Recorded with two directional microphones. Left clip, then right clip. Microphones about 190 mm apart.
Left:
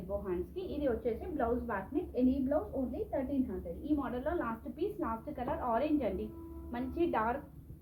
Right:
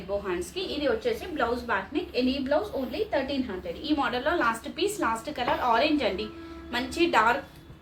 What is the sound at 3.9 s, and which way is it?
A woman's voice, 20° right (ahead or behind).